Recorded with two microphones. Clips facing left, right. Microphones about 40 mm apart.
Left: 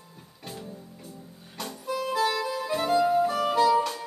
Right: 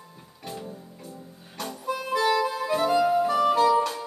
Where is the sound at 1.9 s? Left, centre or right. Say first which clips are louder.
Right 2 dB; right.